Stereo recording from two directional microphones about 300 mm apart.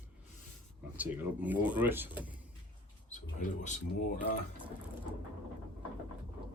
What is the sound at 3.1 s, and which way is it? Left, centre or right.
Speech, left.